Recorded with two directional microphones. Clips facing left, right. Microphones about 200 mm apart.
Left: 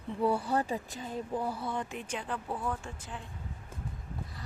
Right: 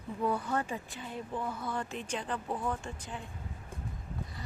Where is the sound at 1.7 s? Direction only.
15° left (ahead or behind).